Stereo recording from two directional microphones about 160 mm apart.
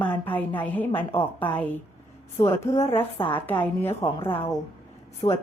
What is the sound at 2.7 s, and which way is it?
Speech, 35° left (ahead or behind).